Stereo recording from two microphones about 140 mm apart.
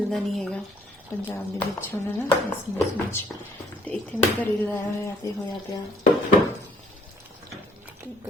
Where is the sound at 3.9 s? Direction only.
10° left (ahead or behind).